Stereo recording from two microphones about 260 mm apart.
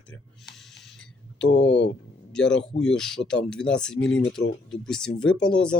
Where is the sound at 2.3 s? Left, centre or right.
Centre.